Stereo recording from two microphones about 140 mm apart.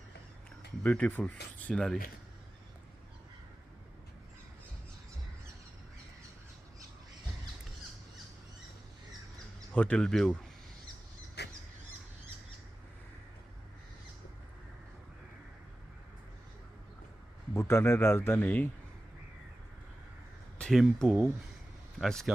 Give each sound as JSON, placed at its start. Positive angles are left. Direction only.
{"t": 0.8, "sound": "speech", "side_deg": 10}
{"t": 9.7, "sound": "speech", "side_deg": 10}
{"t": 17.5, "sound": "speech", "side_deg": 20}
{"t": 20.6, "sound": "speech", "side_deg": 0}